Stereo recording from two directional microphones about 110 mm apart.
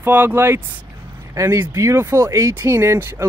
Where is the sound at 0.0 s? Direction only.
20° right (ahead or behind).